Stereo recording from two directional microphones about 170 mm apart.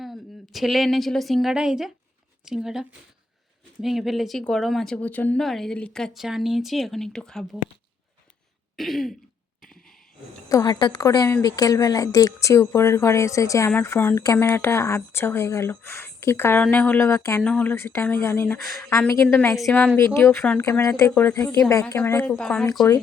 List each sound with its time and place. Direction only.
0.0 s a woman's voice: centre (ahead or behind)
8.7 s throat clearing: centre (ahead or behind)
10.5 s a woman's voice: 20° left (ahead or behind); by 22.6 s 5° left (ahead or behind)